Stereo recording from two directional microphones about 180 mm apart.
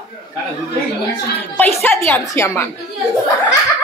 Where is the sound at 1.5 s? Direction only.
10° left (ahead or behind).